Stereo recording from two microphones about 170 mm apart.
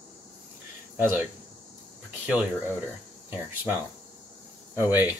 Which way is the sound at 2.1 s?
5° right (ahead or behind).